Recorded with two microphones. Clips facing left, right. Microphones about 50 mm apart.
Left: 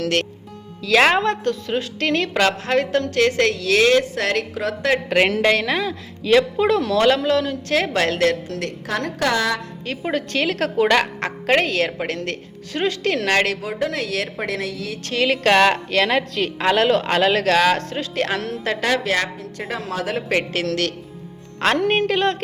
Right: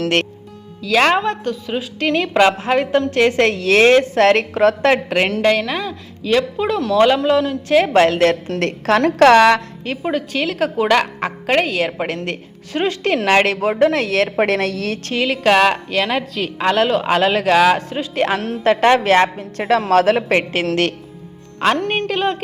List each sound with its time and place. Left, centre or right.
0.8 s a woman's voice: centre; by 4.9 s right
5.0 s a woman's voice: centre
8.2 s a woman's voice: right
9.0 s a woman's voice: right
9.2 s a woman's voice: right
10.0 s a woman's voice: centre; by 13.6 s right
13.6 s a woman's voice: right
15.2 s a woman's voice: centre; by 19.3 s right
19.4 s a woman's voice: right
20.3 s a woman's voice: right
21.6 s a woman's voice: centre